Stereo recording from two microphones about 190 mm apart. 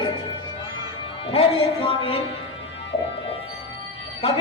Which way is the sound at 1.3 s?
30° left (ahead or behind).